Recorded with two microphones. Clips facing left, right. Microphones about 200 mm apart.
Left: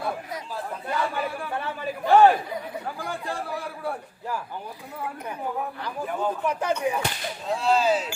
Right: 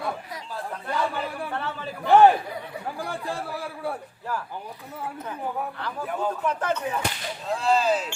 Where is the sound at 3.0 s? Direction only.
Centre (ahead or behind).